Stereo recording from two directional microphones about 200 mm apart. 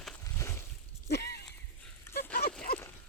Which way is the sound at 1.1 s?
55° left (ahead or behind).